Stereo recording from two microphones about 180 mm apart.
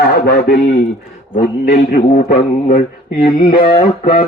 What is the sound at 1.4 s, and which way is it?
Speech, 50° left (ahead or behind).